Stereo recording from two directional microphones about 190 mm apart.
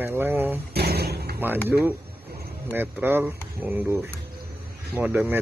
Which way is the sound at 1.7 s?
10° right (ahead or behind).